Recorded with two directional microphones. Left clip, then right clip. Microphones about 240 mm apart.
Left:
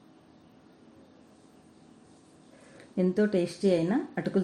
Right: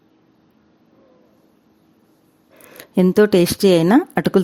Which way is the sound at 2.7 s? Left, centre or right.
Right.